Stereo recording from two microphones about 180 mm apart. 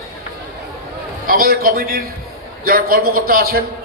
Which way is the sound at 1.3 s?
55° right (ahead or behind).